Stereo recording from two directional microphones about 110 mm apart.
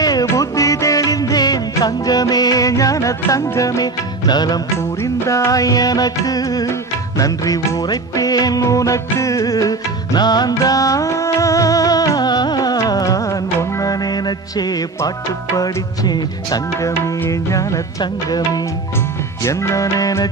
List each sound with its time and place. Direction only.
0.0 s music: 35° left (ahead or behind)
5.0 s music: 25° left (ahead or behind)
19.4 s music: 30° left (ahead or behind)